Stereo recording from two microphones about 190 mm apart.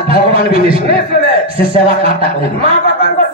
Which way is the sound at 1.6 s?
30° right (ahead or behind).